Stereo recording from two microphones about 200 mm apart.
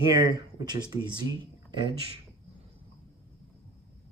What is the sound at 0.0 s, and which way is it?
Speech, 20° right (ahead or behind).